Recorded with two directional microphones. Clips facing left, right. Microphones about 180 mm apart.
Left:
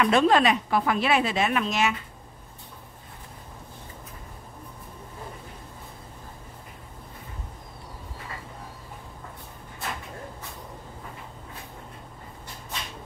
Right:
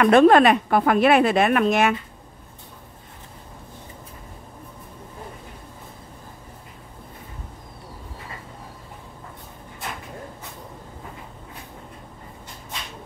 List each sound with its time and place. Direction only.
0.0 s a woman's voice: 55° right (ahead or behind)